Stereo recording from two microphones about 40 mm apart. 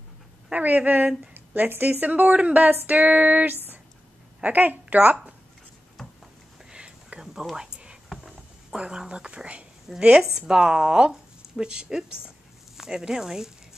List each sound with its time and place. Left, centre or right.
0.5 s speech: right
1.3 s a sound: right
1.7 s a woman's voice: right
6.7 s whispering: right
7.5 s a sound: centre
8.7 s speech: right
9.9 s speech: centre